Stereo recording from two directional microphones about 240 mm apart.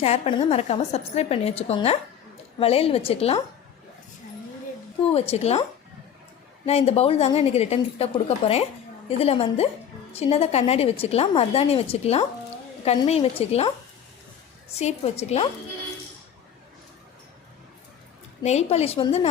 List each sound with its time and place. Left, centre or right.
0.0 s a woman's voice: left
5.1 s a woman's voice: left
6.7 s a woman's voice: left
18.4 s a woman's voice: left